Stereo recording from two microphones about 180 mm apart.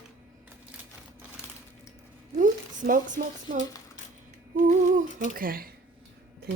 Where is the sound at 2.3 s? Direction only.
45° right (ahead or behind).